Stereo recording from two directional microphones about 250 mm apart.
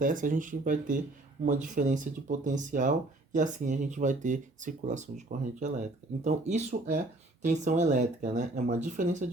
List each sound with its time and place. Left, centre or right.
0.0 s speech: right